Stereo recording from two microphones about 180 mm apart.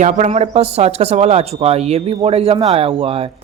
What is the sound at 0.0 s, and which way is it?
Speech, 40° right (ahead or behind).